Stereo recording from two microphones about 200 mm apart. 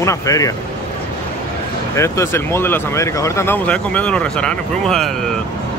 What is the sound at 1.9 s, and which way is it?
Speech, 15° left (ahead or behind).